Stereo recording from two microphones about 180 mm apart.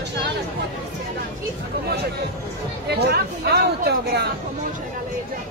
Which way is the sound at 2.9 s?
65° right (ahead or behind).